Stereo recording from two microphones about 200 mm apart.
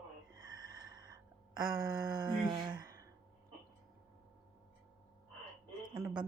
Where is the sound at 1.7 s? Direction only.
20° right (ahead or behind).